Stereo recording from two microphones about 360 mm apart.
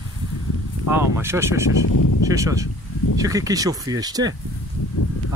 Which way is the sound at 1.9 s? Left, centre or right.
Left.